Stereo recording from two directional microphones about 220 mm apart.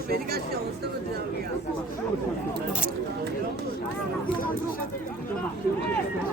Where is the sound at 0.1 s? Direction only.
45° right (ahead or behind).